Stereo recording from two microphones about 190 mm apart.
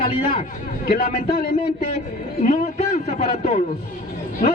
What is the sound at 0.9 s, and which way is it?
A man's voice, 45° left (ahead or behind).